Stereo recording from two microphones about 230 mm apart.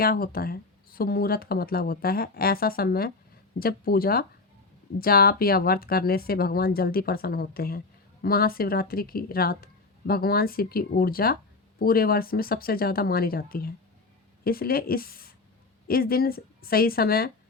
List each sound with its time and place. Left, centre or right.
0.0 s speech: left